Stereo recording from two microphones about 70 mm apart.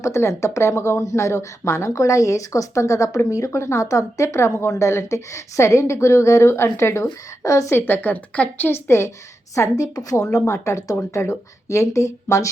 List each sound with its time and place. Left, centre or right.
0.0 s speech: left
7.8 s a woman's voice: left
8.9 s speech: left
9.6 s a woman's voice: left
10.3 s speech: left